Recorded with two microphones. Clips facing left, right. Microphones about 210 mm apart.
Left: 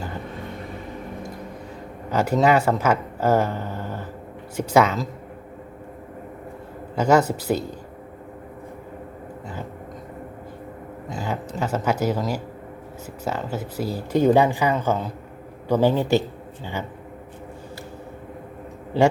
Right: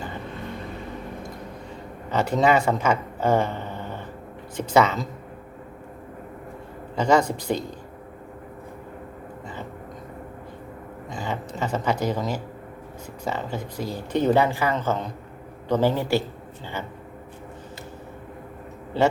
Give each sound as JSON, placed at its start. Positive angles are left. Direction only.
{"t": 2.0, "sound": "speech", "side_deg": 10}
{"t": 6.9, "sound": "speech", "side_deg": 10}
{"t": 11.1, "sound": "speech", "side_deg": 5}